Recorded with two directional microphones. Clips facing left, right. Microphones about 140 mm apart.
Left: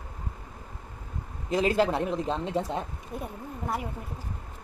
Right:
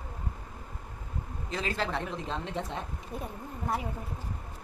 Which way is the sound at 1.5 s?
10° left (ahead or behind).